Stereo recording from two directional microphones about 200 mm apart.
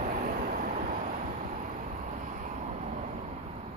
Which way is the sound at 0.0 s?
40° right (ahead or behind).